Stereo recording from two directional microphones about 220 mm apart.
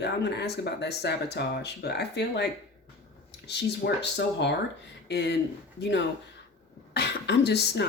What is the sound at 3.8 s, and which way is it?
Speech, 45° left (ahead or behind).